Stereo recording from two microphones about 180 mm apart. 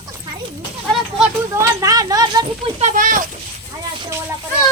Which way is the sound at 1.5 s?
20° right (ahead or behind).